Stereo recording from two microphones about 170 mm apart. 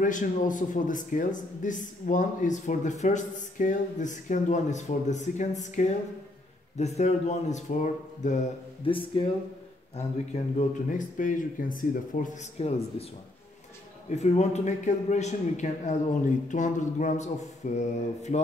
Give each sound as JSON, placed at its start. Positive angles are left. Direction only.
{"t": 0.0, "sound": "speech", "side_deg": 50}
{"t": 8.8, "sound": "speech", "side_deg": 30}
{"t": 9.9, "sound": "speech", "side_deg": 45}
{"t": 12.5, "sound": "speech", "side_deg": 40}
{"t": 14.1, "sound": "speech", "side_deg": 40}